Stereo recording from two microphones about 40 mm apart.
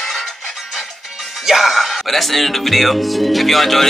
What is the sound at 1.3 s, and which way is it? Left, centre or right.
Speech, centre.